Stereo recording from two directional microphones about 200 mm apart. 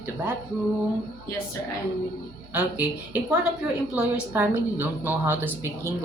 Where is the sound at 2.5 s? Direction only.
10° right (ahead or behind).